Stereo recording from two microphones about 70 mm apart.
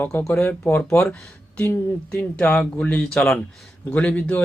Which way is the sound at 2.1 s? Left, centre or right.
Left.